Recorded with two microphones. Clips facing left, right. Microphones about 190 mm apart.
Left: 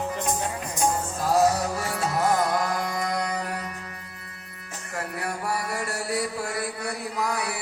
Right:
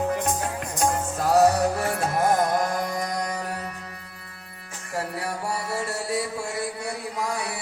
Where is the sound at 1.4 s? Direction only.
60° right (ahead or behind); by 3.5 s 45° right (ahead or behind).